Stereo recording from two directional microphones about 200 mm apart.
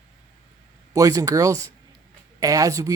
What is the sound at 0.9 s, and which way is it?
Speech, 15° right (ahead or behind).